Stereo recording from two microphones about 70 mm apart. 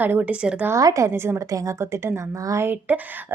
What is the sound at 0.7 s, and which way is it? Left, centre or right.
Speech, right.